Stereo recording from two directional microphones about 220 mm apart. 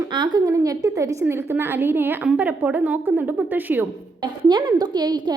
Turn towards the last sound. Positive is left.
turn(degrees=-20)  # may be behind; listen again after turning